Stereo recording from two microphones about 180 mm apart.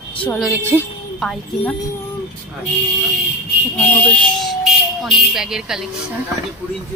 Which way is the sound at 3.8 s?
5° left (ahead or behind).